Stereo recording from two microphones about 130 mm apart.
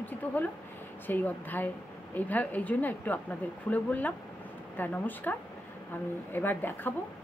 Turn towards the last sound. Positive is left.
turn(degrees=15)  # may be behind; listen again after turning